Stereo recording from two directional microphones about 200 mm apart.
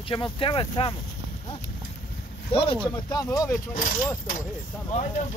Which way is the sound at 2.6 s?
25° left (ahead or behind).